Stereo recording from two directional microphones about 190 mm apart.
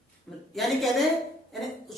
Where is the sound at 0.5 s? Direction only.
Centre (ahead or behind).